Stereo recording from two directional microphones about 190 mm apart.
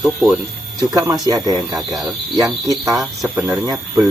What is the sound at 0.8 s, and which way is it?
Speech, 20° right (ahead or behind).